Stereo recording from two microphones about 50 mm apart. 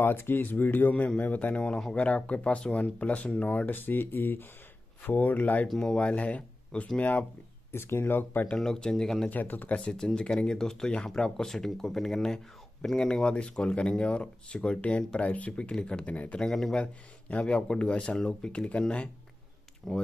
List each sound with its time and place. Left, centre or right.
0.0 s speech: left
0.4 s speech: left
5.8 s speech: centre; by 7.2 s left
7.7 s speech: left
8.5 s speech: centre
9.3 s speech: left
9.8 s speech: centre
16.1 s speech: left
16.3 s speech: centre
16.8 s speech: left
19.8 s speech: centre